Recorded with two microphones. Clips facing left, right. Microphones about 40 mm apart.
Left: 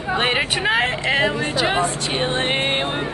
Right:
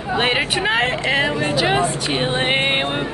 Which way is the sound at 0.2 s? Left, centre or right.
Centre.